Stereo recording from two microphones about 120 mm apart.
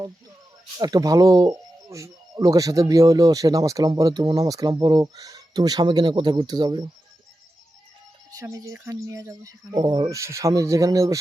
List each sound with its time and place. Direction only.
0.8 s speech: 35° right (ahead or behind)
8.3 s speech: 30° right (ahead or behind)
10.2 s speech: 25° right (ahead or behind)